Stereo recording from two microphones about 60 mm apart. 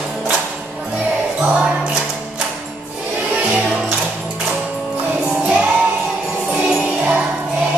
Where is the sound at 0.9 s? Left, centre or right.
Centre.